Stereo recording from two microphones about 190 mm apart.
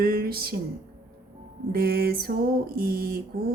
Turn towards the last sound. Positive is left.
turn(degrees=-50)  # may be behind; listen again after turning